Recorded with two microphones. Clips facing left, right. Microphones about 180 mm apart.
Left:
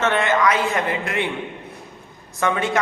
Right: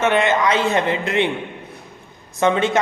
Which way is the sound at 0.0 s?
20° right (ahead or behind).